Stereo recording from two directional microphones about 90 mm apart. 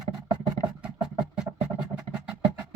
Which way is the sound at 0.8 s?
10° right (ahead or behind).